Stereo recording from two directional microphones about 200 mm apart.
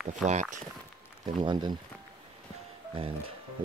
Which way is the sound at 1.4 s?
20° right (ahead or behind).